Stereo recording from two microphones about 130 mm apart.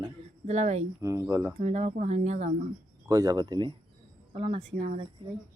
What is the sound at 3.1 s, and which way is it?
Speech, 25° right (ahead or behind).